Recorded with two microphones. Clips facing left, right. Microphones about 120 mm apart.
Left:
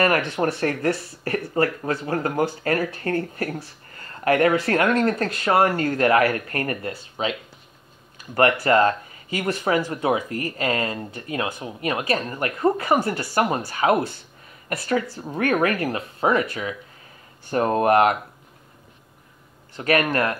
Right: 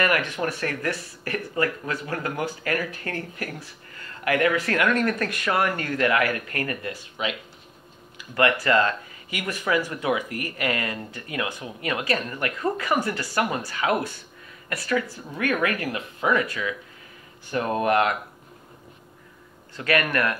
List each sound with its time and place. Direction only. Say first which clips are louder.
0.4 s speech: left 5 dB; 35° left (ahead or behind)
8.4 s speech: left 3 dB; 30° left (ahead or behind)
19.8 s speech: left 3 dB; 30° left (ahead or behind)